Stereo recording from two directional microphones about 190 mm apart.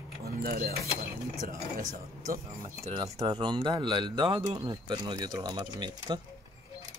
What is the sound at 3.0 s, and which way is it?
Speech, 25° right (ahead or behind).